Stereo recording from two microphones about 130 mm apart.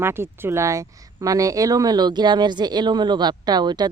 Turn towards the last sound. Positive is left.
turn(degrees=-35)  # may be behind; listen again after turning